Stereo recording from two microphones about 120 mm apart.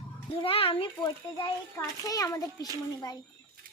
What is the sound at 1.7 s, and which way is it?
Speech, 30° left (ahead or behind).